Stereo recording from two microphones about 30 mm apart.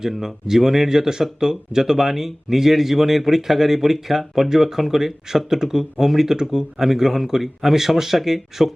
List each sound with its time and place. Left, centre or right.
0.2 s speech: centre
4.4 s speech: centre